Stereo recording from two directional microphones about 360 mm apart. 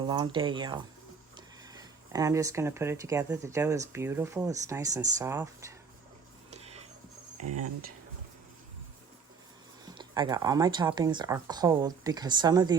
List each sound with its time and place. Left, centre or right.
0.1 s speech: centre
6.5 s a sound: centre
7.4 s speech: right
9.8 s speech: centre